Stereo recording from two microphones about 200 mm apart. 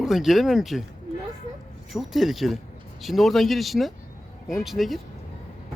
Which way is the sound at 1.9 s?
Centre (ahead or behind).